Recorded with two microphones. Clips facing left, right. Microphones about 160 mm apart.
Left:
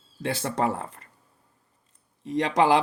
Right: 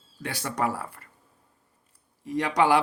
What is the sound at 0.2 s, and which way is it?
Speech, 25° left (ahead or behind).